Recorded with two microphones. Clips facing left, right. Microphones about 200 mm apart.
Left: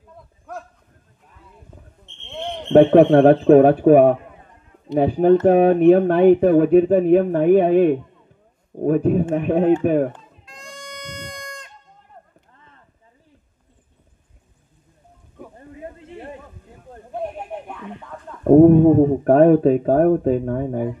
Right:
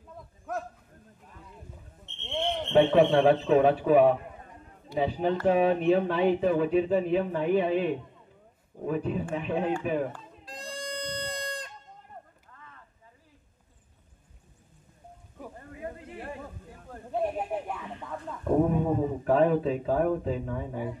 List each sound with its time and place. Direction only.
2.7 s speech: 60° left (ahead or behind)
10.4 s goat: 35° right (ahead or behind)
12.5 s a sound: 30° left (ahead or behind)
16.0 s a sound: 25° left (ahead or behind)
17.5 s music: 5° right (ahead or behind)
18.4 s speech: 50° left (ahead or behind)